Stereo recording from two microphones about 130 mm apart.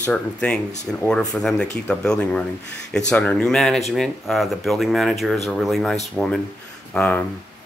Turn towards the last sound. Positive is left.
turn(degrees=15)  # may be behind; listen again after turning